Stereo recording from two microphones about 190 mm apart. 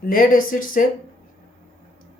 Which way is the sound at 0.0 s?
45° left (ahead or behind).